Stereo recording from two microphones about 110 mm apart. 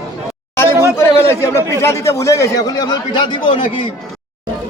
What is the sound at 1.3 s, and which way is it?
A man's voice, 25° left (ahead or behind).